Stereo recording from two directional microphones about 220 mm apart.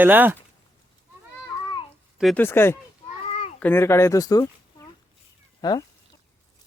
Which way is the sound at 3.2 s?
25° left (ahead or behind).